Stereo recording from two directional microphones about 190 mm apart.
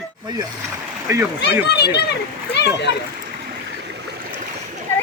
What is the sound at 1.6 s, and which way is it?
A child's voice, 60° left (ahead or behind).